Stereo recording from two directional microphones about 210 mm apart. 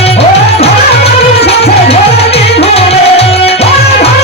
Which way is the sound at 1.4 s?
30° left (ahead or behind).